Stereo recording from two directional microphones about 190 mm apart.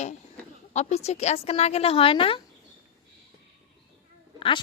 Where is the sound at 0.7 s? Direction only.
35° left (ahead or behind).